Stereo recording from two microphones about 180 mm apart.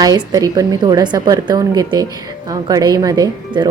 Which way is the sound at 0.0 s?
25° right (ahead or behind).